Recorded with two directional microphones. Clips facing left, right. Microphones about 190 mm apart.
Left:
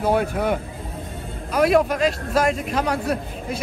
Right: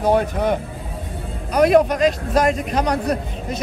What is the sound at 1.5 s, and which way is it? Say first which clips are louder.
A man's voice: right 3 dB; centre (ahead or behind).